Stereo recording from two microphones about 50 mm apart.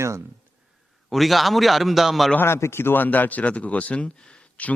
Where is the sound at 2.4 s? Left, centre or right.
Left.